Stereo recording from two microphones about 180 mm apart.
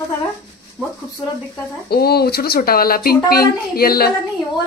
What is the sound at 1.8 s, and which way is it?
Speech, 60° left (ahead or behind).